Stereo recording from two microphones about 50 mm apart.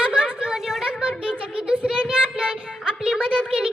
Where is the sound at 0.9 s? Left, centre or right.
Right.